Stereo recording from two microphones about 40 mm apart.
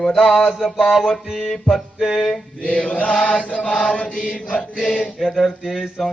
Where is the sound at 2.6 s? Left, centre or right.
Left.